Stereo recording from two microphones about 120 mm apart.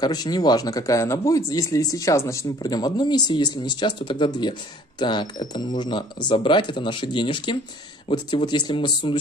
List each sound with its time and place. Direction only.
0.0 s speech: 35° left (ahead or behind)